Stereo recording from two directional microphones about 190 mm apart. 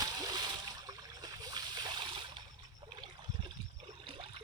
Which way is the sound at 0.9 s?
20° right (ahead or behind).